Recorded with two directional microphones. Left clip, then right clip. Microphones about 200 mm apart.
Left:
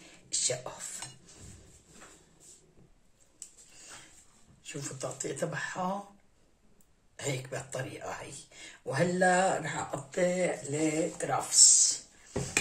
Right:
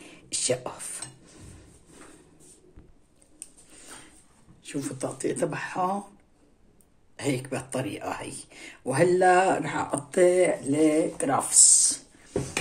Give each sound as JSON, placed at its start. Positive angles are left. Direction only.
{"t": 0.0, "sound": "a sound", "side_deg": -55}
{"t": 4.6, "sound": "speech", "side_deg": -45}
{"t": 7.2, "sound": "speech", "side_deg": -40}